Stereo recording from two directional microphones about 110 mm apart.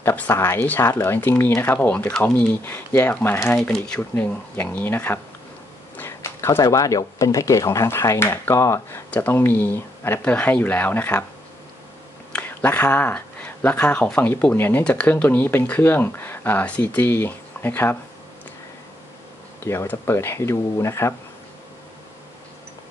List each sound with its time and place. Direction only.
0.0 s speech: 20° left (ahead or behind)
3.5 s speech: 5° left (ahead or behind); by 9.0 s 25° left (ahead or behind)
9.1 s speech: 15° left (ahead or behind)
12.3 s speech: 15° left (ahead or behind)
19.6 s speech: 25° left (ahead or behind)